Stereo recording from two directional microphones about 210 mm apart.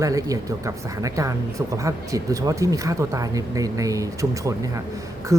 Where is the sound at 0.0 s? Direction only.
15° right (ahead or behind).